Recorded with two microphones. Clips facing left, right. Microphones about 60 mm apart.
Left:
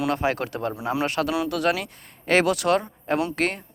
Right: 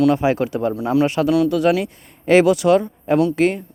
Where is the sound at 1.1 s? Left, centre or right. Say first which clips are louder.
Right 8 dB; centre.